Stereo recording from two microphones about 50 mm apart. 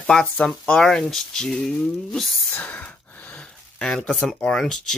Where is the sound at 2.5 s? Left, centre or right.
Left.